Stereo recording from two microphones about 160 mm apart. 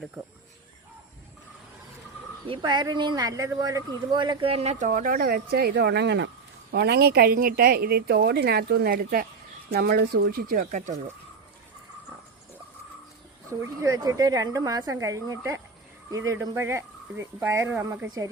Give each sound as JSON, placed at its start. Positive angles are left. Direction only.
{"t": 2.5, "sound": "speech", "side_deg": -30}
{"t": 9.7, "sound": "speech", "side_deg": -80}
{"t": 13.5, "sound": "speech", "side_deg": -20}